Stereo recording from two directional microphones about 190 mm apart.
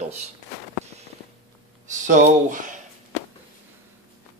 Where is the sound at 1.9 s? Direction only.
40° right (ahead or behind).